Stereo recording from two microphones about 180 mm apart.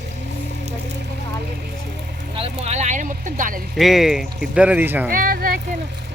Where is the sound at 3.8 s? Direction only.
Centre (ahead or behind).